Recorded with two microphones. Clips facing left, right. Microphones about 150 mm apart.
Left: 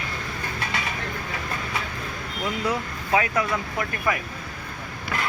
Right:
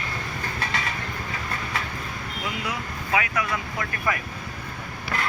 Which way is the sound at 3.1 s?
30° left (ahead or behind).